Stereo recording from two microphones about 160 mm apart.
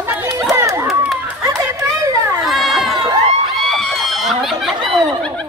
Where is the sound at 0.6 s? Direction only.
15° right (ahead or behind).